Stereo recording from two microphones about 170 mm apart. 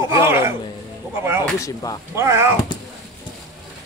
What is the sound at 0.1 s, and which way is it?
Music, 15° right (ahead or behind).